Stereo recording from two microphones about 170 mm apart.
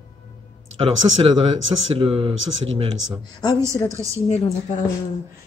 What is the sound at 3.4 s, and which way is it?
Speech, 25° left (ahead or behind).